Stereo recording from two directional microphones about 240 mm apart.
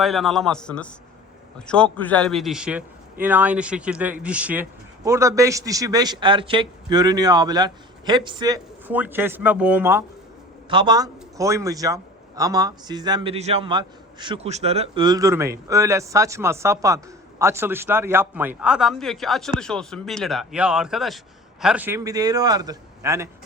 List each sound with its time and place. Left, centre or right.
0.0 s a man's voice: centre
10.7 s a man's voice: centre